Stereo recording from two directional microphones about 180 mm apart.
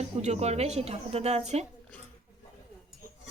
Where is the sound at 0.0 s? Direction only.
35° right (ahead or behind).